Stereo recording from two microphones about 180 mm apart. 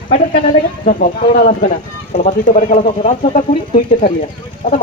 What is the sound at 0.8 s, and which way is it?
Speech, 45° left (ahead or behind).